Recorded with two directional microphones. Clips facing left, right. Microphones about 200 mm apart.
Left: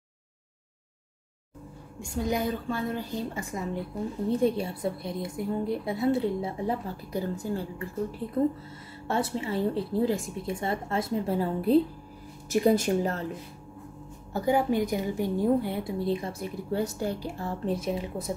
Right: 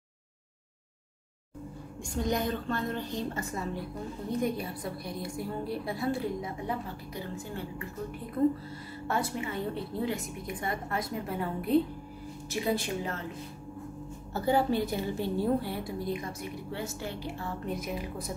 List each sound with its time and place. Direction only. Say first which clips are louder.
2.0 s a woman's voice: left 2 dB; 5° left (ahead or behind)
4.3 s a woman's voice: left 5 dB; 30° left (ahead or behind)
9.0 s a woman's voice: left 3 dB; 25° left (ahead or behind)
12.4 s speech: left 8 dB; 45° left (ahead or behind)
14.3 s a woman's voice: left 2 dB; 15° left (ahead or behind)